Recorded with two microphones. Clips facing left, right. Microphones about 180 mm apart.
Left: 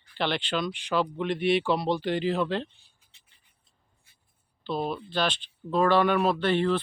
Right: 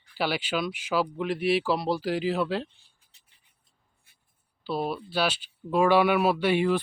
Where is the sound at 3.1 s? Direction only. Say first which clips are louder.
Left 2 dB; 40° right (ahead or behind).